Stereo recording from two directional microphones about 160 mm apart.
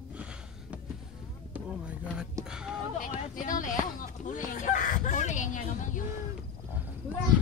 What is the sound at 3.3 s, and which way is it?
Chicken, 55° left (ahead or behind).